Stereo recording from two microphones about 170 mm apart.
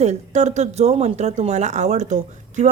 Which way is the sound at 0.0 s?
40° right (ahead or behind).